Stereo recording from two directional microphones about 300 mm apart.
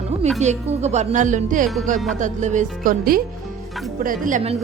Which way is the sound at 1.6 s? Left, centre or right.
Centre.